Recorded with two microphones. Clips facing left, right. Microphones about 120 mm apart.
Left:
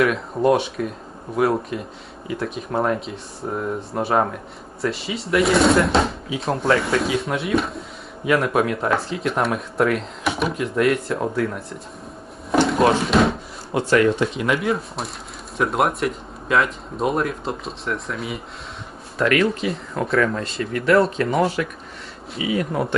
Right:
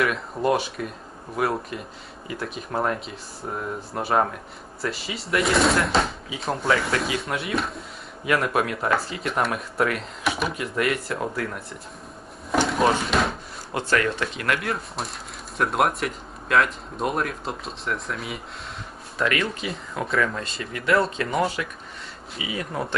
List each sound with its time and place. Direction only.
0.4 s speech: centre (ahead or behind)
12.5 s a sound: centre (ahead or behind)
13.7 s speech: 5° left (ahead or behind)